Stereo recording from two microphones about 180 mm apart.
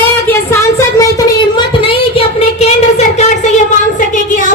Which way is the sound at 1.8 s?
30° left (ahead or behind).